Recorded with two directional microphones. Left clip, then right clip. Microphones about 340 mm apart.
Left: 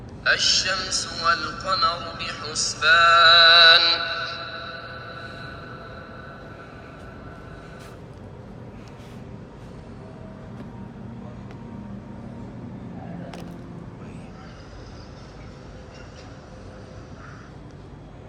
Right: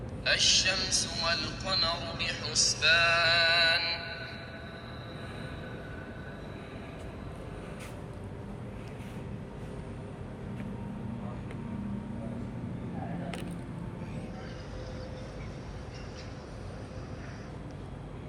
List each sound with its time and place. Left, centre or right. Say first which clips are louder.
0.3 s a man's voice: left 5 dB; left
4.4 s music: left 11 dB; left